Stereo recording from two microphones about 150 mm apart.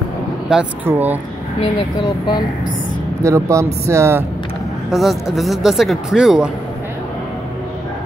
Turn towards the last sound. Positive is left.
turn(degrees=-5)  # may be behind; listen again after turning